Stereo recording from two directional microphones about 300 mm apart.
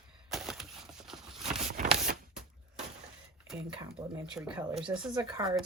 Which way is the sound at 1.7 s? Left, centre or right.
Right.